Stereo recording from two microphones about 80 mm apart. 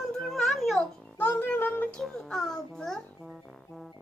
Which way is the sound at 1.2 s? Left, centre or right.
Left.